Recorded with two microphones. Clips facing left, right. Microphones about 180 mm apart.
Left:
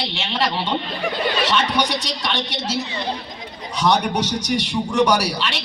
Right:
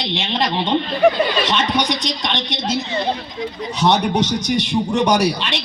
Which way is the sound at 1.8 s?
10° left (ahead or behind).